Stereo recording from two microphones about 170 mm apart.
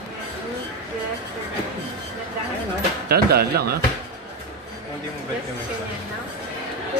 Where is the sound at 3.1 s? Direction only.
65° right (ahead or behind).